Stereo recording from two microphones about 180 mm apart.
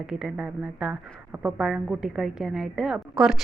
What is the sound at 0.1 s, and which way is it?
A woman's voice, 5° right (ahead or behind).